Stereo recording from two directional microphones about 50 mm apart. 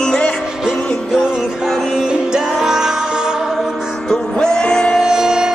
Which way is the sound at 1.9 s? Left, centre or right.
Centre.